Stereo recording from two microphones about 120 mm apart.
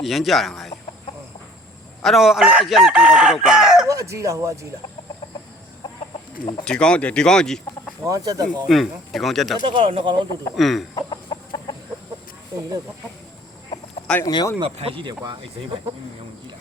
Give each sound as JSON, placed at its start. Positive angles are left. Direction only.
{"t": 0.0, "sound": "chicken", "side_deg": 0}
{"t": 2.0, "sound": "chicken", "side_deg": 0}
{"t": 3.8, "sound": "speech", "side_deg": -25}
{"t": 6.7, "sound": "speech", "side_deg": 10}
{"t": 8.0, "sound": "speech", "side_deg": -30}
{"t": 8.6, "sound": "chicken", "side_deg": 0}
{"t": 9.6, "sound": "speech", "side_deg": -50}
{"t": 10.5, "sound": "chicken", "side_deg": 0}
{"t": 10.9, "sound": "chicken", "side_deg": 40}
{"t": 14.3, "sound": "speech", "side_deg": 35}
{"t": 14.6, "sound": "speech", "side_deg": -50}